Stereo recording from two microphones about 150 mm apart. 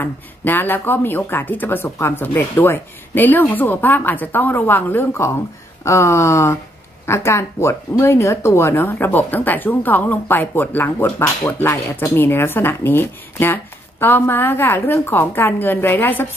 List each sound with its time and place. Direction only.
0.0 s speech: 15° left (ahead or behind)